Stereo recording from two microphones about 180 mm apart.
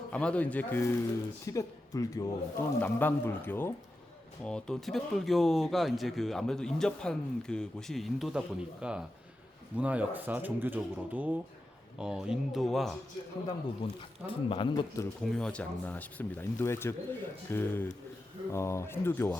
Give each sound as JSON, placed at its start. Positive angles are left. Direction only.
{"t": 0.1, "sound": "speech", "side_deg": 5}
{"t": 13.8, "sound": "speech", "side_deg": 30}
{"t": 15.2, "sound": "speech", "side_deg": 5}